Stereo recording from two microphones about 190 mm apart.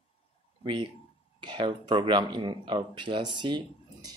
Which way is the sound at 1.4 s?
25° right (ahead or behind).